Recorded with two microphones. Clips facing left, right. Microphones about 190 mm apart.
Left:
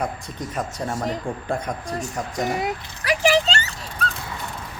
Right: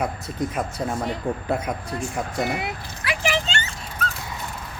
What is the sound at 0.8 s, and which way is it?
Speech, 40° left (ahead or behind).